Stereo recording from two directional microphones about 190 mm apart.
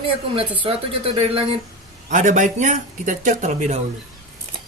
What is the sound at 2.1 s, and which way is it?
Speech, 40° right (ahead or behind).